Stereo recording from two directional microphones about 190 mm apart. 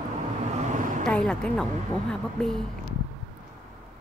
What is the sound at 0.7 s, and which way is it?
Vehicle, 45° right (ahead or behind).